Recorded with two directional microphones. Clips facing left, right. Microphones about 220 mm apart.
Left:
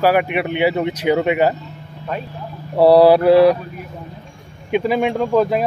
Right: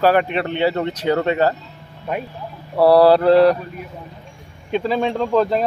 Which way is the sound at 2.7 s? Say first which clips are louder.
Left 2 dB; 15° left (ahead or behind).